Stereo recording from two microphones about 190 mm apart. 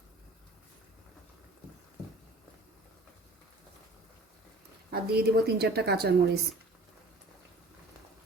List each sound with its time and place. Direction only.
4.9 s speech: 55° right (ahead or behind)